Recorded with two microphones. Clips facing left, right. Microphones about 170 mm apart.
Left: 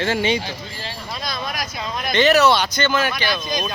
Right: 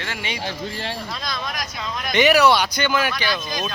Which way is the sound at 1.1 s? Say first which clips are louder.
Left 2 dB; 5° left (ahead or behind).